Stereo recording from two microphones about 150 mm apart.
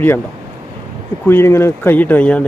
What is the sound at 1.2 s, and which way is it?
Speech, 15° left (ahead or behind).